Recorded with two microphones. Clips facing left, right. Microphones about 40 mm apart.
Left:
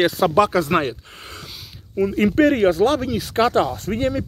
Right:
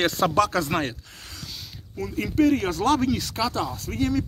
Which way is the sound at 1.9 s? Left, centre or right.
Left.